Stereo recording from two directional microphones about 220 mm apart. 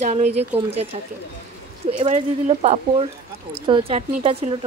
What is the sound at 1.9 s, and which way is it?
Speech, 30° right (ahead or behind).